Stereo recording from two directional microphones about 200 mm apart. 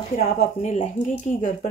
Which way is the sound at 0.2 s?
40° left (ahead or behind).